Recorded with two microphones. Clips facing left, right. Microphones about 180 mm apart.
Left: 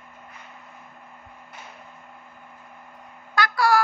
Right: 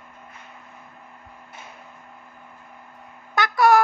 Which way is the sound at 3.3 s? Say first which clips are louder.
Right 4 dB; 20° right (ahead or behind).